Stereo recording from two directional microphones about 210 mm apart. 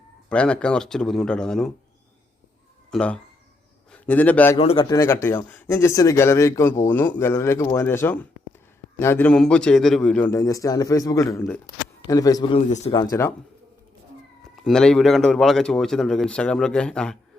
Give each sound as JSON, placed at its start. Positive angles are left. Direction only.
{"t": 0.3, "sound": "a man's voice", "side_deg": 5}
{"t": 2.9, "sound": "speech", "side_deg": 5}
{"t": 4.5, "sound": "speech", "side_deg": 25}
{"t": 4.9, "sound": "speech", "side_deg": 15}
{"t": 12.5, "sound": "speech", "side_deg": 35}
{"t": 12.9, "sound": "speech", "side_deg": 15}
{"t": 14.6, "sound": "a man's voice", "side_deg": 5}